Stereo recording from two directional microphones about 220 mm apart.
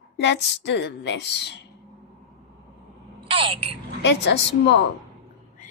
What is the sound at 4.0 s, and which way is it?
Speech, 50° left (ahead or behind).